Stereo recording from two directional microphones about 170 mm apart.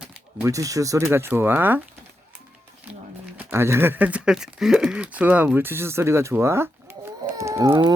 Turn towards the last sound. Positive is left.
turn(degrees=-25)  # may be behind; listen again after turning